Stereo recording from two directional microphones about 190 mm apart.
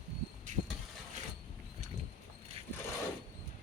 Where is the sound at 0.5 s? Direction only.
40° right (ahead or behind).